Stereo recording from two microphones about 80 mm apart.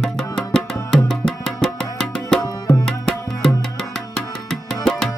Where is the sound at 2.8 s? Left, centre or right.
Centre.